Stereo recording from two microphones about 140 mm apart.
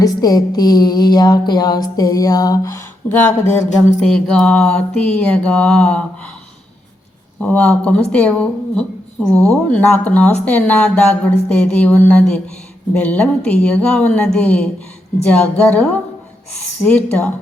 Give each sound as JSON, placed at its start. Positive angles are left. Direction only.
{"t": 0.0, "sound": "music", "side_deg": 25}
{"t": 4.0, "sound": "speech", "side_deg": 5}
{"t": 7.4, "sound": "speech", "side_deg": 10}